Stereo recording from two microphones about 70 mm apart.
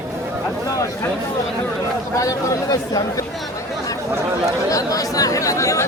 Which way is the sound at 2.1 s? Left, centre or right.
Left.